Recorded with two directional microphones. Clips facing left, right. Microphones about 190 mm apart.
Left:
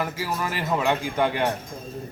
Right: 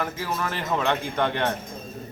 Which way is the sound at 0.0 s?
5° left (ahead or behind).